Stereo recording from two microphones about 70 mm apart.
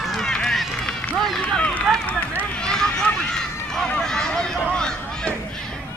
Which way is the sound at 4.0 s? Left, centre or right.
Centre.